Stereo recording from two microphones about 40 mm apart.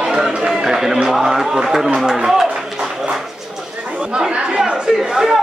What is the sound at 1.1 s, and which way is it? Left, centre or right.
Speech, centre.